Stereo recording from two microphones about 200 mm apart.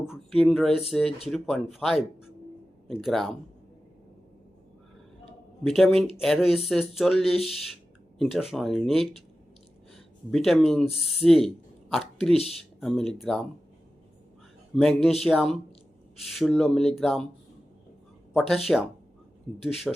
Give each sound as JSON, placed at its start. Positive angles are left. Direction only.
{"t": 0.0, "sound": "speech", "side_deg": 0}
{"t": 5.6, "sound": "speech", "side_deg": 0}
{"t": 12.3, "sound": "speech", "side_deg": 30}
{"t": 12.8, "sound": "speech", "side_deg": 0}
{"t": 14.8, "sound": "speech", "side_deg": 0}
{"t": 18.3, "sound": "speech", "side_deg": 0}